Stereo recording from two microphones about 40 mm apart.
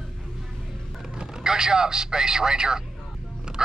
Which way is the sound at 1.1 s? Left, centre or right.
Centre.